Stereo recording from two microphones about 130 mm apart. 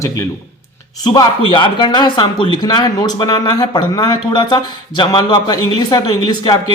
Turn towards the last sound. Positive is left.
turn(degrees=30)  # may be behind; listen again after turning